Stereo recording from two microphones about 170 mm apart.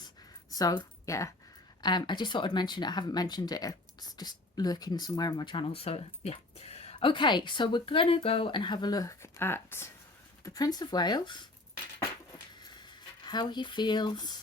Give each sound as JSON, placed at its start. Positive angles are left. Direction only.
{"t": 0.5, "sound": "speech", "side_deg": 25}
{"t": 13.2, "sound": "speech", "side_deg": 25}